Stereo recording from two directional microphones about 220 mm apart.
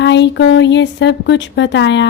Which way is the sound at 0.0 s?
55° left (ahead or behind).